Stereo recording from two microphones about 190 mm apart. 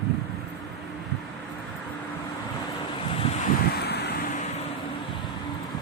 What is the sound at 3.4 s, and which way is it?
Vehicle, 55° left (ahead or behind).